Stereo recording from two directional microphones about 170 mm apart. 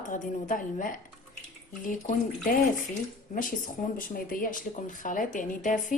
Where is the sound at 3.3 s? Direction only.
50° left (ahead or behind).